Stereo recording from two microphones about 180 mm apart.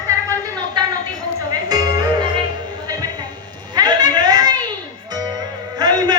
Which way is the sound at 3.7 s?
20° right (ahead or behind).